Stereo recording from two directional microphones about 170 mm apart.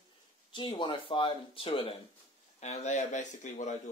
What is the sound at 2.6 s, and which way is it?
Speech, 45° left (ahead or behind).